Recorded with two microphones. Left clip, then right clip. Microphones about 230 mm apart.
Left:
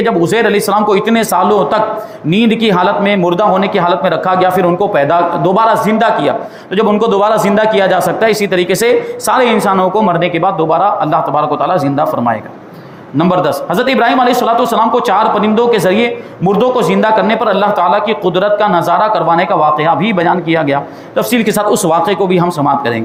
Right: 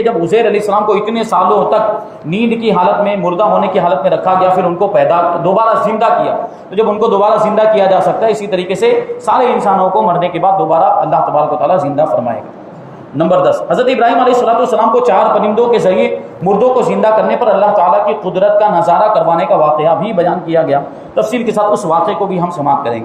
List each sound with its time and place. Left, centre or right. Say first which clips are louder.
0.0 s a man's voice: even; left
13.7 s a man's voice: right 1 dB; left